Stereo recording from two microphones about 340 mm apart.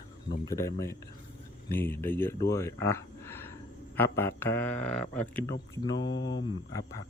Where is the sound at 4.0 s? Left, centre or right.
Centre.